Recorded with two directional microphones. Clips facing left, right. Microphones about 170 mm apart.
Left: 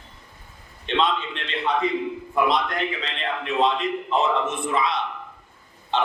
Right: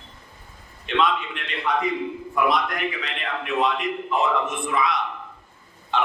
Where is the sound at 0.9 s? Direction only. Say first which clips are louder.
Even; 30° left (ahead or behind).